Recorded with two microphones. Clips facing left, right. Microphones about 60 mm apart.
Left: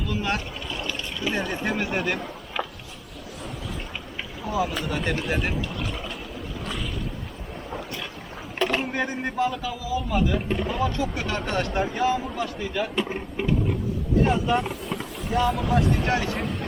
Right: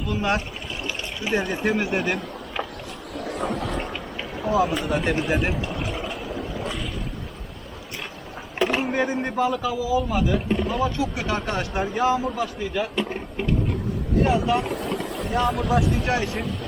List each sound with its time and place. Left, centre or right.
0.3 s speech: centre
3.2 s a sound: right
4.6 s speech: centre
5.4 s pour: centre
8.5 s speech: centre
14.3 s speech: centre